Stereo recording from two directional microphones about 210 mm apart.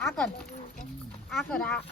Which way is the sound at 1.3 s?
Centre (ahead or behind).